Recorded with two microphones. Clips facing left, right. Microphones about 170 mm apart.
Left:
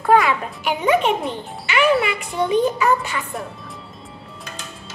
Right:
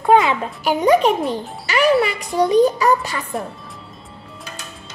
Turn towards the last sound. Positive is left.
turn(degrees=-35)  # may be behind; listen again after turning